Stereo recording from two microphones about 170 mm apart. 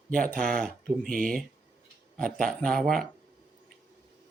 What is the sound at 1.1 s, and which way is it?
Speech, 55° right (ahead or behind).